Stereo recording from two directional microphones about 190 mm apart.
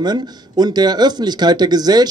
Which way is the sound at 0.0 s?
20° right (ahead or behind).